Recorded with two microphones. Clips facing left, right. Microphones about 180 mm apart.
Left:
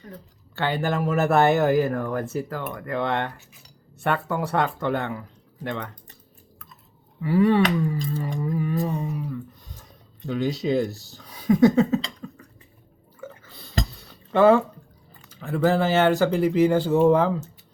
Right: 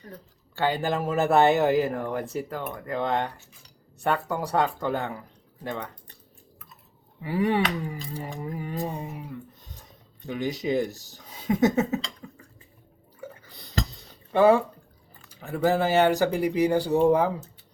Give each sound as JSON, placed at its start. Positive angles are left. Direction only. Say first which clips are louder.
{"t": 0.5, "sound": "speech", "louder": "left 1 dB", "side_deg": -15}
{"t": 2.7, "sound": "a sound", "louder": "left 2 dB", "side_deg": -30}
{"t": 4.4, "sound": "speech", "louder": "left 1 dB", "side_deg": -35}
{"t": 5.7, "sound": "speech", "louder": "left 1 dB", "side_deg": -10}
{"t": 7.2, "sound": "speech", "louder": "left 5 dB", "side_deg": -20}
{"t": 8.4, "sound": "a sound", "louder": "left 6 dB", "side_deg": -20}
{"t": 10.2, "sound": "speech", "louder": "left 3 dB", "side_deg": -15}
{"t": 13.1, "sound": "bathtub", "louder": "left 2 dB", "side_deg": -15}
{"t": 13.9, "sound": "a sound", "louder": "left 2 dB", "side_deg": -20}
{"t": 15.5, "sound": "speech", "louder": "left 1 dB", "side_deg": -15}